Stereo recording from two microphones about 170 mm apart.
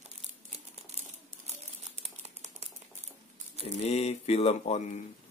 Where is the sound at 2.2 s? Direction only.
40° right (ahead or behind).